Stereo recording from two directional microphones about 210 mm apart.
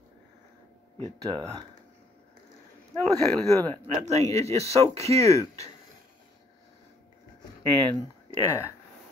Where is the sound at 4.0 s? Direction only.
30° right (ahead or behind).